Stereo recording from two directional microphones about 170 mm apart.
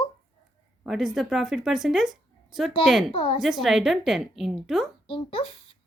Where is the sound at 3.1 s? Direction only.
30° left (ahead or behind).